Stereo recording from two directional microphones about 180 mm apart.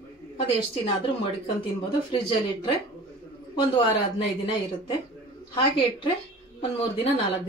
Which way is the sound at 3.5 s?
30° left (ahead or behind).